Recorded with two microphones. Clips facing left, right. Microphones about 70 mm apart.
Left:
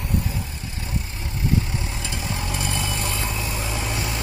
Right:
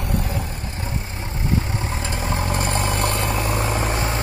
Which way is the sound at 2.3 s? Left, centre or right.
Right.